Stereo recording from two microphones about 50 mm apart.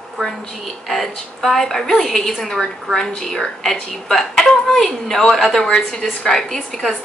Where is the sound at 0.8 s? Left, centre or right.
Centre.